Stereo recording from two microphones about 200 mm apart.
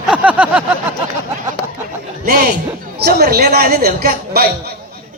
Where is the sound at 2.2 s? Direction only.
50° right (ahead or behind).